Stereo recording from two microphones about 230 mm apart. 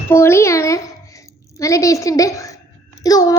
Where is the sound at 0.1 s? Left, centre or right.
Centre.